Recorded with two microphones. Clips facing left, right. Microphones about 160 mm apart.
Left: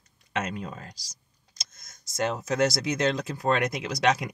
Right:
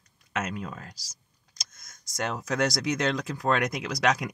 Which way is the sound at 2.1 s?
30° left (ahead or behind).